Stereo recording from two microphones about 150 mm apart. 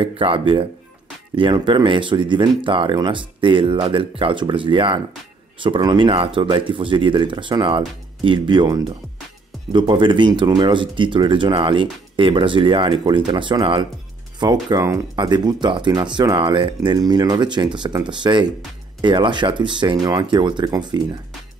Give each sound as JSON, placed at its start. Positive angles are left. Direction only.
{"t": 0.0, "sound": "speech", "side_deg": -35}